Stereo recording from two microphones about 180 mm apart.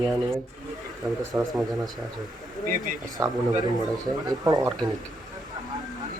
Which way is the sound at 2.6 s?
50° right (ahead or behind).